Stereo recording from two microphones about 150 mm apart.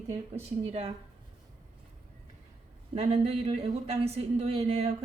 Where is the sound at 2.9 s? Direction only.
45° right (ahead or behind).